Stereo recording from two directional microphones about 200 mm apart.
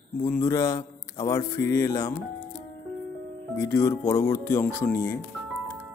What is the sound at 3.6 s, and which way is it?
A man's voice, 15° left (ahead or behind).